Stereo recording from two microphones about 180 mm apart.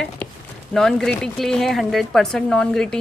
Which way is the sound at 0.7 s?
5° left (ahead or behind).